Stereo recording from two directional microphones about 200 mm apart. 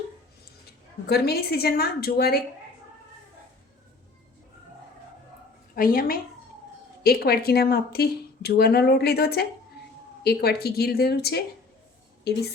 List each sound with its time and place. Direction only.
1.0 s speech: 50° left (ahead or behind)
5.7 s a woman's voice: 45° left (ahead or behind)